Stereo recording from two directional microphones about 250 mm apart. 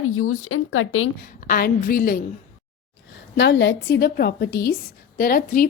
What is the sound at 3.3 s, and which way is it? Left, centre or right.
A woman's voice, left.